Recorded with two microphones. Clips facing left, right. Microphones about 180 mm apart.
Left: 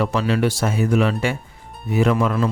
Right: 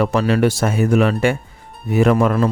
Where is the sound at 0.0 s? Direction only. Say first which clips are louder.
Right 4 dB; 50° right (ahead or behind).